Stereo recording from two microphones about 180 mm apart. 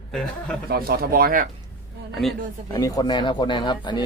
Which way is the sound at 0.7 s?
55° right (ahead or behind).